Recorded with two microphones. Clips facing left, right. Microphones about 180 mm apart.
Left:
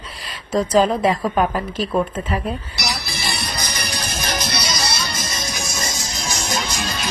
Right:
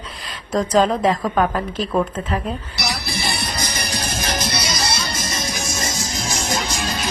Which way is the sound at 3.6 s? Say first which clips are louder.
Right 2 dB; 30° right (ahead or behind).